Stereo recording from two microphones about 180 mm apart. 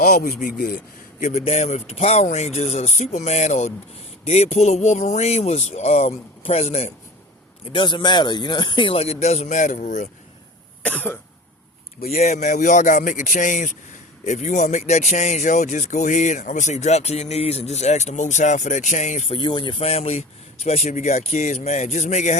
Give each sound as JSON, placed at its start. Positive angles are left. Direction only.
{"t": 0.0, "sound": "speech", "side_deg": 45}
{"t": 10.8, "sound": "cough", "side_deg": 10}
{"t": 12.0, "sound": "speech", "side_deg": 40}